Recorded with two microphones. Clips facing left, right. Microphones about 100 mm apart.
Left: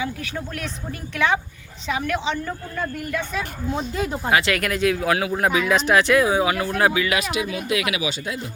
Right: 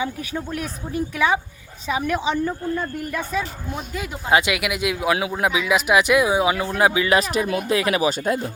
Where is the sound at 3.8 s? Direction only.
30° left (ahead or behind).